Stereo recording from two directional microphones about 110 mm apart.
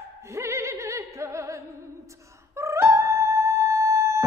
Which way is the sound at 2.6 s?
25° right (ahead or behind).